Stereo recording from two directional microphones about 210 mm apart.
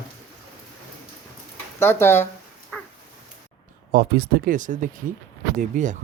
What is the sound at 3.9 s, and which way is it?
Speech, 45° right (ahead or behind).